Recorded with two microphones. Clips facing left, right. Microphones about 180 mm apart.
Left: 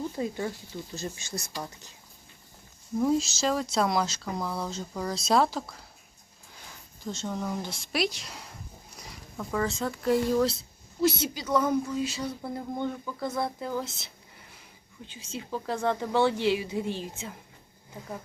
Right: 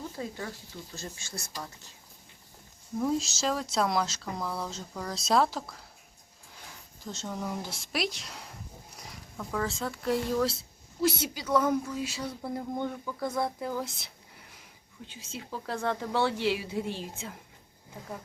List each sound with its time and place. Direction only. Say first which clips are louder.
0.2 s speech: left 6 dB; 20° left (ahead or behind)
3.0 s speech: left 3 dB; centre (ahead or behind)
7.0 s speech: left 3 dB; centre (ahead or behind)
9.4 s speech: left 3 dB; centre (ahead or behind)
15.4 s speech: left 3 dB; centre (ahead or behind)